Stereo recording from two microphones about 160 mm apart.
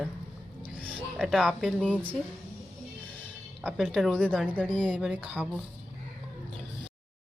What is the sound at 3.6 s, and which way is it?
Speech, centre (ahead or behind).